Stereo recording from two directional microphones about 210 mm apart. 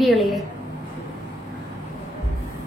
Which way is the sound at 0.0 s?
Centre (ahead or behind).